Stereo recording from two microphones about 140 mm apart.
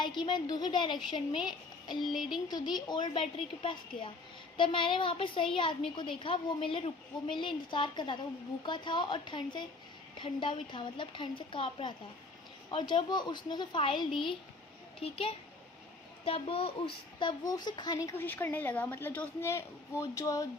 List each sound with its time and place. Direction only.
0.0 s a woman's voice: 35° left (ahead or behind)
2.0 s speech: centre (ahead or behind)
2.5 s a woman's voice: 30° left (ahead or behind)
18.1 s a woman's voice: 15° left (ahead or behind)